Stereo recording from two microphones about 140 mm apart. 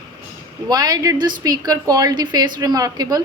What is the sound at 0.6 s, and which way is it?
A woman's voice, 30° right (ahead or behind).